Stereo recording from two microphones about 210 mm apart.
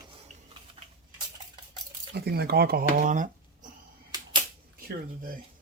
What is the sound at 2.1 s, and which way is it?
Speech, 50° right (ahead or behind).